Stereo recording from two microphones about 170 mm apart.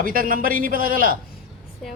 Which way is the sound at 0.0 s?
55° right (ahead or behind).